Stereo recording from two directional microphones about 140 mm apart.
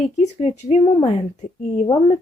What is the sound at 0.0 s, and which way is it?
Speech, 55° left (ahead or behind).